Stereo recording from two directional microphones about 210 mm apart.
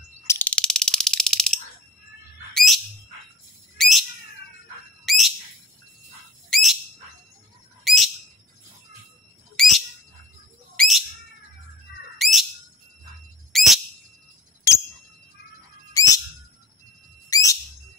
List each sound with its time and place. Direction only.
0.3 s a sound: 5° left (ahead or behind)
2.5 s bird: centre (ahead or behind)
5.0 s bird: centre (ahead or behind)
6.5 s bird: centre (ahead or behind)
7.8 s bird: centre (ahead or behind)
9.6 s bird: centre (ahead or behind)
12.2 s bird: centre (ahead or behind)
13.5 s bird: centre (ahead or behind)
14.7 s a sound: 15° left (ahead or behind)
15.9 s bird: 15° left (ahead or behind)
17.3 s whistle: 15° left (ahead or behind)